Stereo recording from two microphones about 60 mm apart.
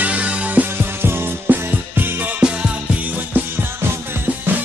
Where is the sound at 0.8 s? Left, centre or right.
Right.